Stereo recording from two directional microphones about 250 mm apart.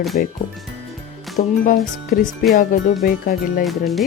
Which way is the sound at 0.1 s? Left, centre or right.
Left.